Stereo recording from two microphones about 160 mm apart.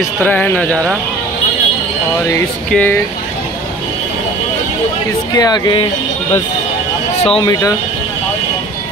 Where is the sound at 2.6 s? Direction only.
10° left (ahead or behind).